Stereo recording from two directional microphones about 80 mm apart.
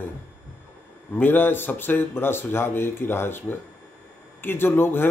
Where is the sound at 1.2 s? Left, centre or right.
Left.